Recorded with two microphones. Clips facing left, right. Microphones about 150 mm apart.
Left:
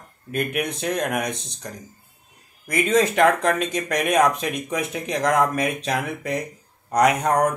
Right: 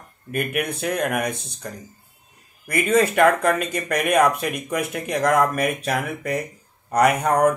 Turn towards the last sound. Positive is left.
turn(degrees=-5)  # may be behind; listen again after turning